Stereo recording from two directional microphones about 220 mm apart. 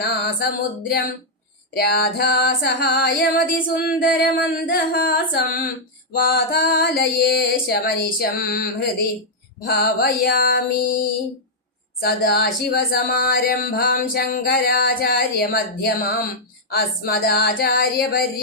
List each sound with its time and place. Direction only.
0.0 s speech: 45° left (ahead or behind)
11.9 s speech: 45° left (ahead or behind)